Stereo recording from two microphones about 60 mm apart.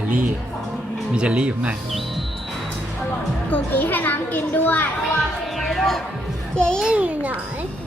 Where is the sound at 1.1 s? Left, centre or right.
Centre.